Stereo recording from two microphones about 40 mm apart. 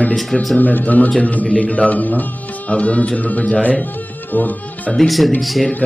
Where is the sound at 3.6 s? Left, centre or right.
Left.